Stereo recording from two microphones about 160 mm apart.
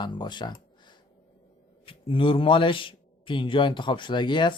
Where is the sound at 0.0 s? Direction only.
30° left (ahead or behind).